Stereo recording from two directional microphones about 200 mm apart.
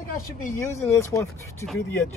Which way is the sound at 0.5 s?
15° left (ahead or behind).